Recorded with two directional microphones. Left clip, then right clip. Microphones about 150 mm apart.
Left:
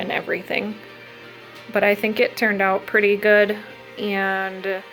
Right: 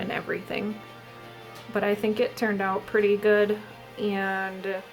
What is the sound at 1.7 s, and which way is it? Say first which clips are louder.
Speech: left 7 dB; 20° left (ahead or behind).